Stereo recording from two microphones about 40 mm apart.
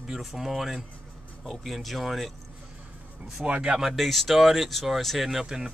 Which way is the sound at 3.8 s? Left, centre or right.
Centre.